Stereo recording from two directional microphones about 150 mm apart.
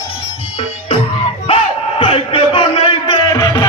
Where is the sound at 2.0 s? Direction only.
35° left (ahead or behind).